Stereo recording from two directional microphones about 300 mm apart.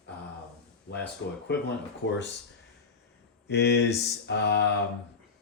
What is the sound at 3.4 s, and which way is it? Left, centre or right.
Speech, left.